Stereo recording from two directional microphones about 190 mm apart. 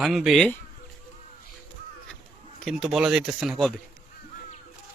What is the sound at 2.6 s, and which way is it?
Speech, centre (ahead or behind).